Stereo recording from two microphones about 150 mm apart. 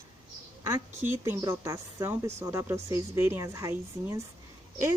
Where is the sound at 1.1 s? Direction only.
15° right (ahead or behind).